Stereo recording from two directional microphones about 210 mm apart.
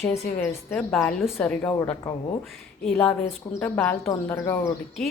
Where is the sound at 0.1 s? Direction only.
10° left (ahead or behind).